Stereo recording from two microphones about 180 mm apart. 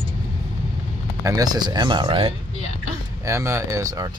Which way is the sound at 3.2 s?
15° right (ahead or behind).